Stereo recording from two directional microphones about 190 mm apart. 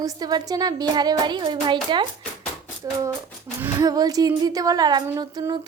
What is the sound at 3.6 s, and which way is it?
A woman's voice, 20° right (ahead or behind).